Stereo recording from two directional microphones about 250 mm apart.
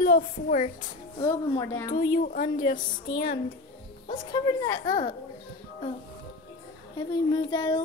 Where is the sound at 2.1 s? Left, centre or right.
Left.